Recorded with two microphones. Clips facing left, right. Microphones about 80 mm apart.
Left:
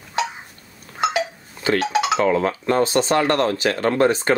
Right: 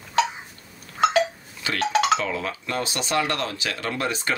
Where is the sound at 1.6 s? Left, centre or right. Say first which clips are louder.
Left 3 dB; left.